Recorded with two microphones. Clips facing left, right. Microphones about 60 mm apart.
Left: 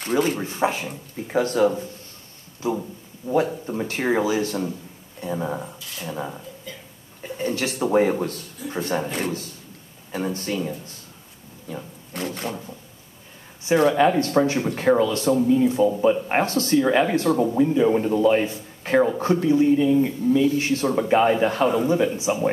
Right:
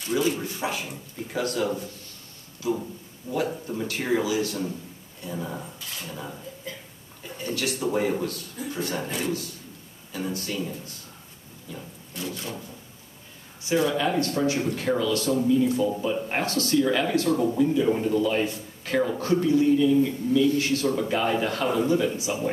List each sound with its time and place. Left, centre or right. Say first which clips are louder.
0.0 s speech: left 3 dB; left
3.3 s speech: left 6 dB; left
7.3 s speech: left 4 dB; left
12.1 s wood: left 5 dB; left
13.7 s speech: left 6 dB; left